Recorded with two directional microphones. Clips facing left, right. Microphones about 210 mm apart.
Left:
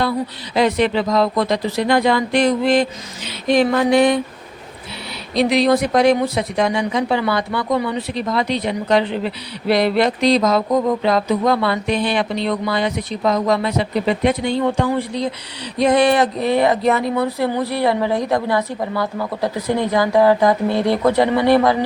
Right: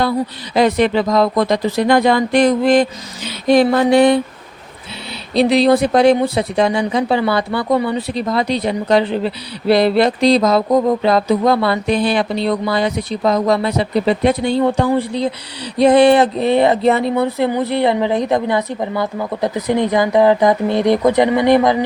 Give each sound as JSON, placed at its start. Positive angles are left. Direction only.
{"t": 0.5, "sound": "speech", "side_deg": -45}
{"t": 3.5, "sound": "speech", "side_deg": -35}
{"t": 5.3, "sound": "speech", "side_deg": -30}